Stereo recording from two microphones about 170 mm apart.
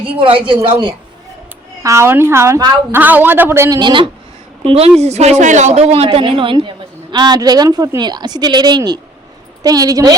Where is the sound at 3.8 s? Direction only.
30° right (ahead or behind).